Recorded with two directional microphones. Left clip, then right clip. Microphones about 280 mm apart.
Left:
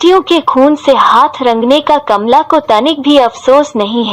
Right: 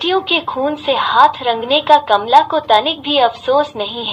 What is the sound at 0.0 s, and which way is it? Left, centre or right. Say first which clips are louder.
A woman's voice: left 8 dB; left.